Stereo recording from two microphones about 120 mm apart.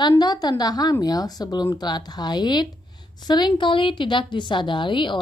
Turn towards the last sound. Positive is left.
turn(degrees=40)  # may be behind; listen again after turning